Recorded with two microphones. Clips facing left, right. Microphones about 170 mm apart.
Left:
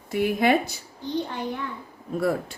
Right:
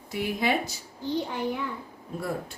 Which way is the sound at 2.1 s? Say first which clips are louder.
Left 7 dB; 90° left.